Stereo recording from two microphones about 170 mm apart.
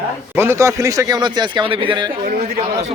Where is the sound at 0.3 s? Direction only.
15° right (ahead or behind).